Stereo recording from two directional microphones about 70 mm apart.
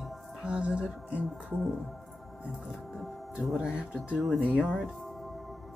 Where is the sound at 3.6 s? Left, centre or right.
Centre.